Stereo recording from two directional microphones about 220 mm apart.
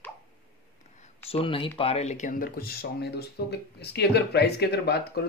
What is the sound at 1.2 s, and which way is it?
Speech, 25° left (ahead or behind).